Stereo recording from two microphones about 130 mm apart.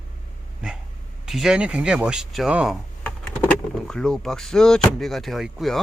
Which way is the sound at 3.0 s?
10° left (ahead or behind).